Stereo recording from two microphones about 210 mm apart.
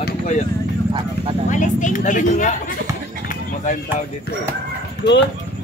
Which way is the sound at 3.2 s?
40° left (ahead or behind).